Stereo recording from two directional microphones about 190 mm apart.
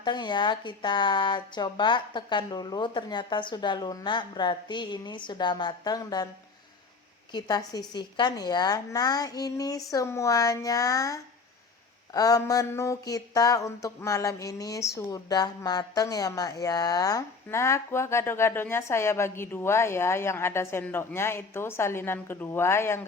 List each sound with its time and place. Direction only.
0.0 s speech: 25° left (ahead or behind)
7.3 s speech: 20° left (ahead or behind)
9.9 s a sound: 15° left (ahead or behind)